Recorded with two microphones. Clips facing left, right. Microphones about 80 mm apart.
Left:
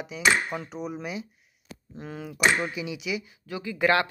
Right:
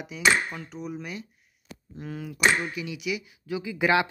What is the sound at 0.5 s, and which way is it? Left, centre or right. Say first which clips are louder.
Speech: left 3 dB; centre.